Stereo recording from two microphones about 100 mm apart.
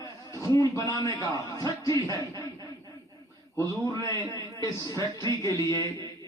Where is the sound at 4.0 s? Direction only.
35° left (ahead or behind).